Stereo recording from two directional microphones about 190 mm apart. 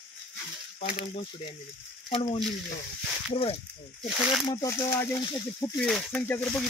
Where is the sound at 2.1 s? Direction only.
25° left (ahead or behind).